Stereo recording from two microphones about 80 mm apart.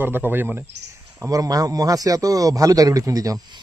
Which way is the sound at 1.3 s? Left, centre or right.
Right.